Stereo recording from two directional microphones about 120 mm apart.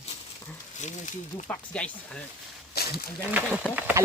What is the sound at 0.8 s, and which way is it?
Speech, 85° left.